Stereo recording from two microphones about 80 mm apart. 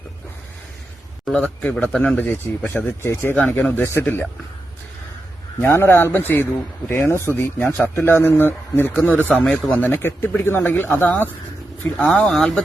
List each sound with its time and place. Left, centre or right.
1.3 s speech: centre
3.0 s speech: left
3.3 s speech: left
5.5 s speech: left
8.9 s speech: centre
9.9 s speech: left
11.9 s speech: centre